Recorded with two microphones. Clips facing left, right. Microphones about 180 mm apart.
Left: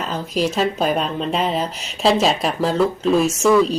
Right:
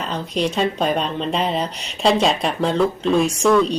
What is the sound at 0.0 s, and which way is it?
A woman's voice, 5° left (ahead or behind).